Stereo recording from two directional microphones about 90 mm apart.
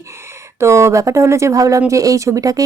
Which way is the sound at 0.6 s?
30° right (ahead or behind).